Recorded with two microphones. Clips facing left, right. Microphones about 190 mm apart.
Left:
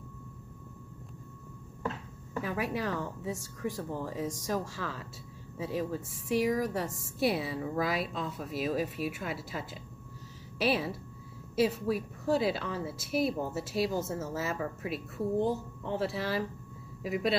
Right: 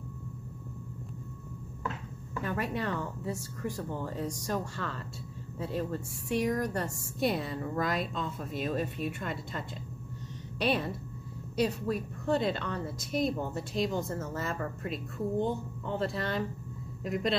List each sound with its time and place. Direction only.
2.4 s speech: centre (ahead or behind)